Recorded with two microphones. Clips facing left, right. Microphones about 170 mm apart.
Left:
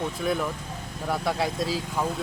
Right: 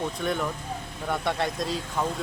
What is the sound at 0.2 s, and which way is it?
Speech, 5° left (ahead or behind).